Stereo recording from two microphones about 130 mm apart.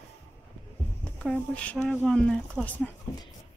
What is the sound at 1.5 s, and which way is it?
Speech, 10° left (ahead or behind).